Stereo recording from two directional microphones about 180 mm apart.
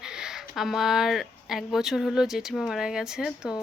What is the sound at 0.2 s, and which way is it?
Speech, centre (ahead or behind).